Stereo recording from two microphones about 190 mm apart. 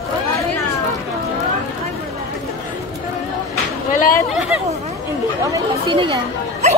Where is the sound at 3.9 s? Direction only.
45° left (ahead or behind).